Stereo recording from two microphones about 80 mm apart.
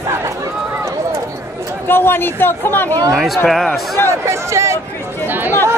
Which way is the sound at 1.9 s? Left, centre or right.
Left.